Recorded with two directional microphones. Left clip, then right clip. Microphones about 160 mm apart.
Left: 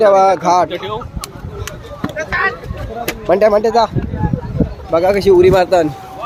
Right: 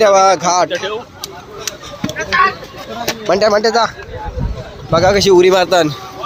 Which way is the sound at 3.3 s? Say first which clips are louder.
Left 1 dB; 15° left (ahead or behind).